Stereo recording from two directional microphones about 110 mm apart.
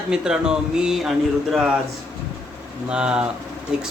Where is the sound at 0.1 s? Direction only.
5° right (ahead or behind).